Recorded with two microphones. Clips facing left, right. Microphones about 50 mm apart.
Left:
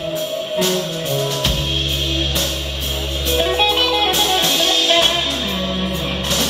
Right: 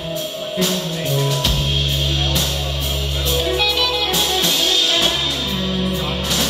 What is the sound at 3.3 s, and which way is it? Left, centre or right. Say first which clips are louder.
Music: left 3 dB; left.